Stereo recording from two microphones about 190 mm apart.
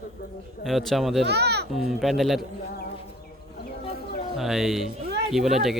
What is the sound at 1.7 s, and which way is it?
Speech, centre (ahead or behind).